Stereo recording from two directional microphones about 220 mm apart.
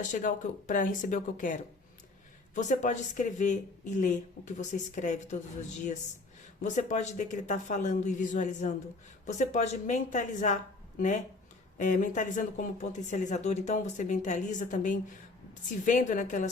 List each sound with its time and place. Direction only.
0.0 s speech: 35° left (ahead or behind)
2.6 s speech: 35° left (ahead or behind)